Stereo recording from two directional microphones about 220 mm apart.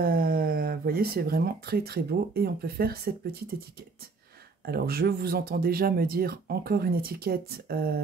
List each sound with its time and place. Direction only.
0.0 s speech: 45° right (ahead or behind)
4.6 s speech: 45° right (ahead or behind)